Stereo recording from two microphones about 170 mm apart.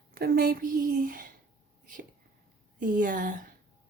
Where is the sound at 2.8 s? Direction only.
50° right (ahead or behind).